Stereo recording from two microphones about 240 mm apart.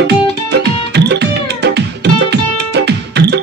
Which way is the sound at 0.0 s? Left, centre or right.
Right.